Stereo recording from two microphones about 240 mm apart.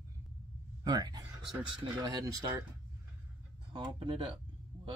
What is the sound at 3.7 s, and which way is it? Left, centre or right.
Speech, centre.